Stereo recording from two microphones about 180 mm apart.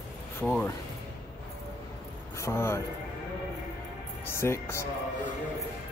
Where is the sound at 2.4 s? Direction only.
15° left (ahead or behind).